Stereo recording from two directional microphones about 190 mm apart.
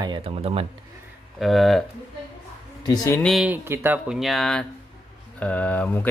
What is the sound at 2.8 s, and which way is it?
Speech, 20° left (ahead or behind).